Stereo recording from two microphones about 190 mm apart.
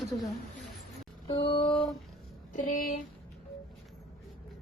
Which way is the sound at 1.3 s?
30° left (ahead or behind).